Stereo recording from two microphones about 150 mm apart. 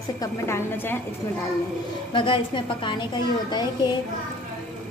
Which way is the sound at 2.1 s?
35° left (ahead or behind).